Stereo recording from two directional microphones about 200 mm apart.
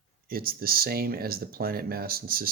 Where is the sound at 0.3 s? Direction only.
45° right (ahead or behind).